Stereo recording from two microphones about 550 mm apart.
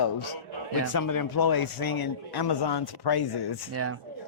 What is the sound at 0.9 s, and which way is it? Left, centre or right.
A man's voice, left.